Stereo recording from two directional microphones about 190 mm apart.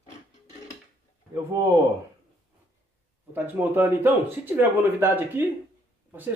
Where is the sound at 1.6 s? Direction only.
15° right (ahead or behind).